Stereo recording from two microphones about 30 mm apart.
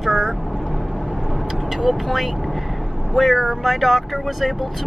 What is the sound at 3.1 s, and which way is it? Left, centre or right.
Speech, centre.